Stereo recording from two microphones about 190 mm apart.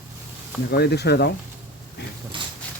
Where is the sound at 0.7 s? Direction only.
60° left (ahead or behind).